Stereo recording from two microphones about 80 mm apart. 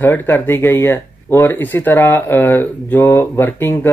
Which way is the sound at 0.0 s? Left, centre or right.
Left.